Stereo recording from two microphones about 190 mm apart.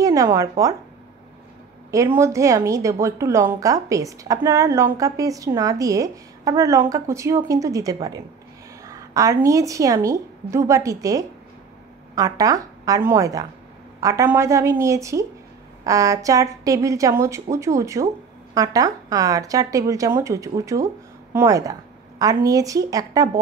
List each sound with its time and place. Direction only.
0.0 s speech: 15° right (ahead or behind)
1.9 s a woman's voice: 15° right (ahead or behind)